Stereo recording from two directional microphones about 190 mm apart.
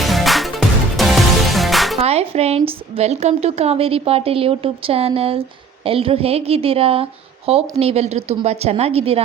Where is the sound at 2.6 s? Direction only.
30° right (ahead or behind).